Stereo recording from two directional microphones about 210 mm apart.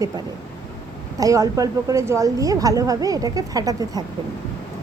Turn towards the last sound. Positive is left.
turn(degrees=-20)  # may be behind; listen again after turning